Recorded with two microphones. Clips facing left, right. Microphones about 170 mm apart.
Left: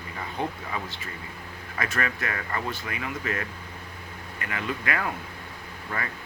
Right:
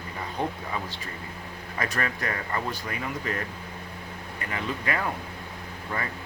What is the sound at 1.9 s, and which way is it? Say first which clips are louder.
Speech: left 1 dB; 35° right (ahead or behind).